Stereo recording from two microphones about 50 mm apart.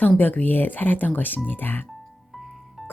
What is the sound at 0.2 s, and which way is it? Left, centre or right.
Speech, left.